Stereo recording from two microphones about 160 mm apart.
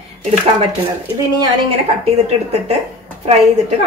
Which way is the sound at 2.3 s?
40° right (ahead or behind).